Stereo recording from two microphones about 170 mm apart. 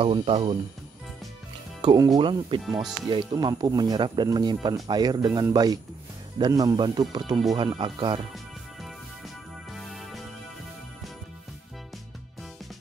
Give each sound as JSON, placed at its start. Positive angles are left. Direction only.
{"t": 0.0, "sound": "speech", "side_deg": -35}
{"t": 1.8, "sound": "speech", "side_deg": -25}
{"t": 9.8, "sound": "music", "side_deg": 0}